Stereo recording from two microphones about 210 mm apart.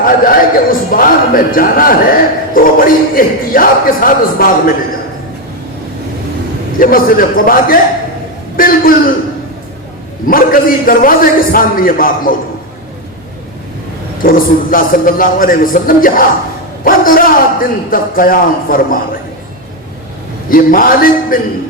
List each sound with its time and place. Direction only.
0.0 s a man's voice: 40° left (ahead or behind)
6.7 s a man's voice: 40° left (ahead or behind)
10.2 s a man's voice: 40° left (ahead or behind)
14.2 s a man's voice: 40° left (ahead or behind)
20.5 s a man's voice: 40° left (ahead or behind)